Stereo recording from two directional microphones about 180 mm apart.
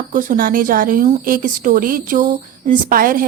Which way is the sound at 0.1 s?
50° right (ahead or behind).